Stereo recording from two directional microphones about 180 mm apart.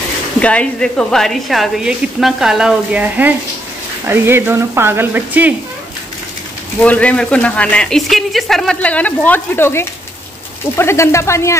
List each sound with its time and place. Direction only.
0.4 s a woman's voice: 5° left (ahead or behind); by 5.5 s 10° right (ahead or behind)
6.8 s speech: 5° left (ahead or behind)